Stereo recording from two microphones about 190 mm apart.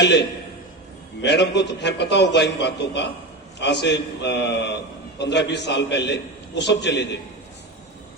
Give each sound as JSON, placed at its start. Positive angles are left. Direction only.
{"t": 0.0, "sound": "a man's voice", "side_deg": 65}